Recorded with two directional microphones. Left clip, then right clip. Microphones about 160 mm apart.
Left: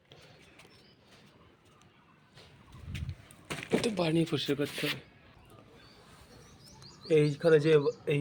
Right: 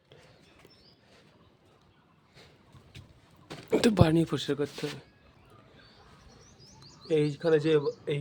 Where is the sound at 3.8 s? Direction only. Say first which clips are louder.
Right 9 dB; 70° right (ahead or behind).